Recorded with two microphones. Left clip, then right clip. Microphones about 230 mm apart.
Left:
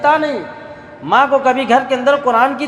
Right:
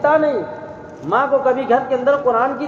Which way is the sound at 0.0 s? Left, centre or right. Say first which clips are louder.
Left 1 dB; left.